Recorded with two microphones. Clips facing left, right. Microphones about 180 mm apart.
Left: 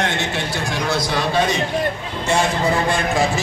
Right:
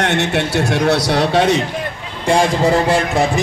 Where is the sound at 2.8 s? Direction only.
75° right (ahead or behind).